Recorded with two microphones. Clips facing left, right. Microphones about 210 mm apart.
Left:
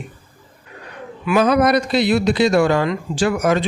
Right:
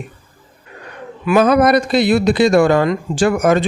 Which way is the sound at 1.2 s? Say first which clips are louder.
Right 3 dB; 45° right (ahead or behind).